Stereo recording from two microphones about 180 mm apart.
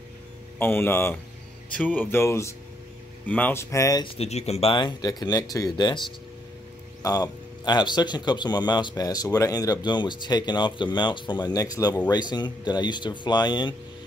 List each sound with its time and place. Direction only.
0.6 s speech: 10° left (ahead or behind)
4.2 s speech: 35° left (ahead or behind)
7.0 s speech: 20° left (ahead or behind)